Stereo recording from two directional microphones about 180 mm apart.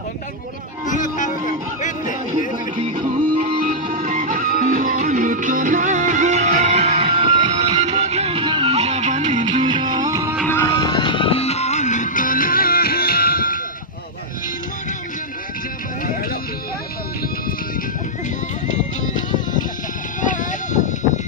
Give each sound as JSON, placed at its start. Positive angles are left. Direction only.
{"t": 0.9, "sound": "music", "side_deg": 45}
{"t": 2.8, "sound": "music", "side_deg": -30}
{"t": 3.6, "sound": "music", "side_deg": -45}
{"t": 9.6, "sound": "music", "side_deg": -25}
{"t": 10.4, "sound": "music", "side_deg": 10}
{"t": 10.7, "sound": "music", "side_deg": 25}
{"t": 18.7, "sound": "music", "side_deg": 45}
{"t": 20.2, "sound": "a sound", "side_deg": 45}